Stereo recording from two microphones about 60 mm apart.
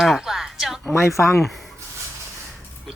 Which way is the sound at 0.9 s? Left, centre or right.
Left.